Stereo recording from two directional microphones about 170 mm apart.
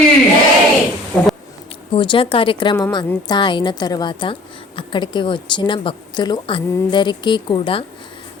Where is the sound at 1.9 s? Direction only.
30° left (ahead or behind).